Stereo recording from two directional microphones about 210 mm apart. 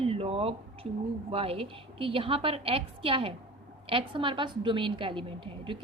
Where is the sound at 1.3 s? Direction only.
25° right (ahead or behind).